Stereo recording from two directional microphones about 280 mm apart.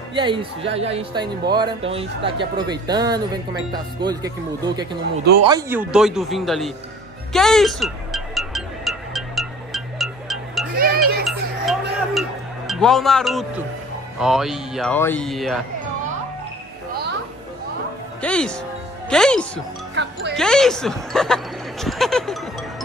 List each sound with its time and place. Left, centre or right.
0.1 s speech: centre
5.4 s speech: centre
7.3 s music: centre
10.8 s music: right
11.2 s music: centre
14.2 s speech: centre
18.2 s speech: centre
20.0 s music: right
20.3 s speech: centre